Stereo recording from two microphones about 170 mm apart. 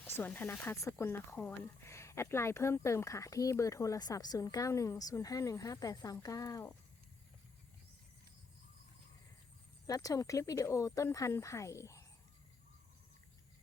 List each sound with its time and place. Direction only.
0.2 s speech: 10° left (ahead or behind)
9.8 s speech: 20° left (ahead or behind)